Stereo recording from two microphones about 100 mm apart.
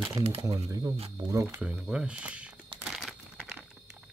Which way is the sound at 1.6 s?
10° right (ahead or behind).